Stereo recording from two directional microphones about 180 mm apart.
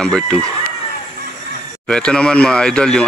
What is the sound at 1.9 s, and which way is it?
Speech, 5° left (ahead or behind).